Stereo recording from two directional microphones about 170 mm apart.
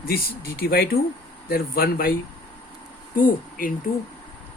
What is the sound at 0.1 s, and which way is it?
Speech, 65° left (ahead or behind).